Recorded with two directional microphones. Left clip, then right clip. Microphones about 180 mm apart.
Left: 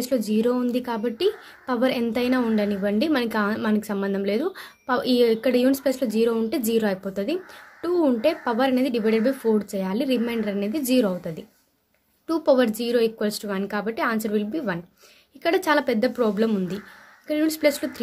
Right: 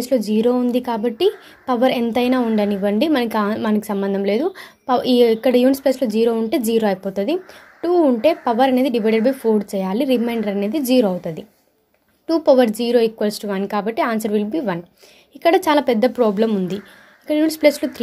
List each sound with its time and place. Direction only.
0.0 s a woman's voice: 15° right (ahead or behind)